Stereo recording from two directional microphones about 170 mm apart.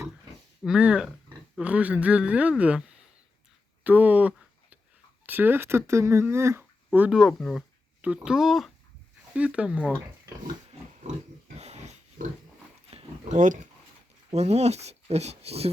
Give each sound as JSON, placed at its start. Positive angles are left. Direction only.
{"t": 0.6, "sound": "speech", "side_deg": -5}
{"t": 3.8, "sound": "a sound", "side_deg": -10}
{"t": 5.2, "sound": "speech", "side_deg": -10}
{"t": 11.5, "sound": "dog", "side_deg": -40}
{"t": 12.9, "sound": "a sound", "side_deg": -40}
{"t": 14.3, "sound": "speech", "side_deg": -40}